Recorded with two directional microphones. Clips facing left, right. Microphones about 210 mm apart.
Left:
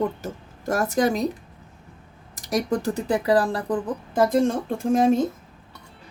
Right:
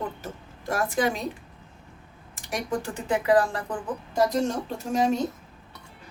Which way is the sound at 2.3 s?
40° left (ahead or behind).